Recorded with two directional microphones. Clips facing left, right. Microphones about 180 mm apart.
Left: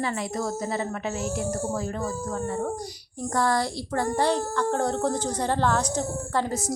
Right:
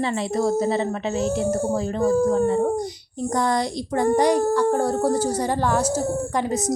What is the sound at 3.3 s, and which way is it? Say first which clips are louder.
A woman's voice: right 2 dB; 20° right (ahead or behind).